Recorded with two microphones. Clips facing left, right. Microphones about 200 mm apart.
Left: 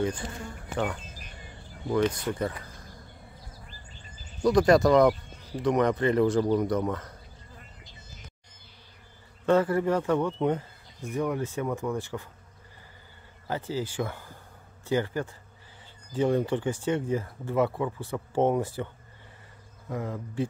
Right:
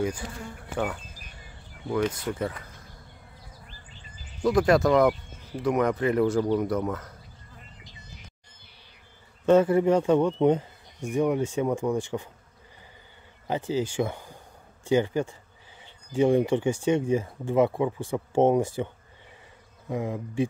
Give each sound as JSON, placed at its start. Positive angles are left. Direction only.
{"t": 0.0, "sound": "speech", "side_deg": -10}
{"t": 4.4, "sound": "speech", "side_deg": -5}
{"t": 9.5, "sound": "speech", "side_deg": -20}
{"t": 13.5, "sound": "speech", "side_deg": -15}
{"t": 19.9, "sound": "speech", "side_deg": -15}